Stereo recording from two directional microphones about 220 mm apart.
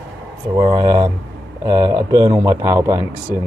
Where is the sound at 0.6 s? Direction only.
20° right (ahead or behind).